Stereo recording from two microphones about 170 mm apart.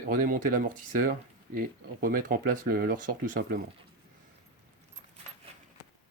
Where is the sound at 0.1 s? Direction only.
55° right (ahead or behind).